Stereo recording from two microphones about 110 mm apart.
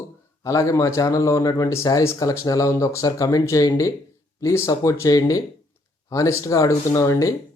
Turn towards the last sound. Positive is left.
turn(degrees=30)  # may be behind; listen again after turning